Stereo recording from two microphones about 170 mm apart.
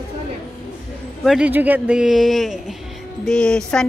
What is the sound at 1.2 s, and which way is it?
Speech, 5° right (ahead or behind).